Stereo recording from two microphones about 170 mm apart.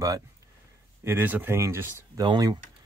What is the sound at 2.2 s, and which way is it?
Speech, 25° right (ahead or behind).